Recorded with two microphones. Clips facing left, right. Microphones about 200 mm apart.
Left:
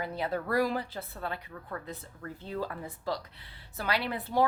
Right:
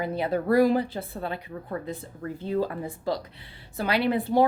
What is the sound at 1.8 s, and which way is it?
A woman's voice, 15° right (ahead or behind).